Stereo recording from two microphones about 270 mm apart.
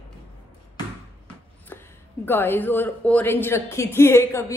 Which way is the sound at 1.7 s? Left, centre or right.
Centre.